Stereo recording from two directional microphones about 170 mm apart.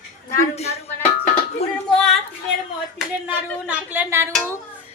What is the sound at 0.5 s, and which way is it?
Speech, 40° left (ahead or behind).